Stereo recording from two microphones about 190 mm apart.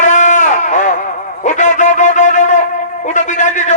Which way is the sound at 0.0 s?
40° left (ahead or behind).